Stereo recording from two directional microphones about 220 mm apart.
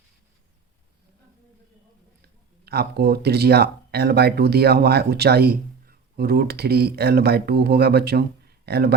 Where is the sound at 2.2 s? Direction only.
45° right (ahead or behind).